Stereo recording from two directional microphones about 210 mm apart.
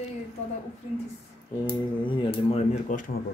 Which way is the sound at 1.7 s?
25° left (ahead or behind).